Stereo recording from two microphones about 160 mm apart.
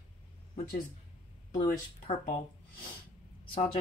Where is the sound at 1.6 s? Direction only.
50° left (ahead or behind).